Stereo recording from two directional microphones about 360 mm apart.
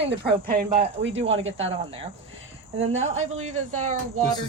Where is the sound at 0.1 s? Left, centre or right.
Right.